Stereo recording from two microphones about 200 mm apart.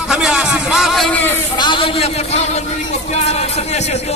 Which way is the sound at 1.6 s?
25° left (ahead or behind).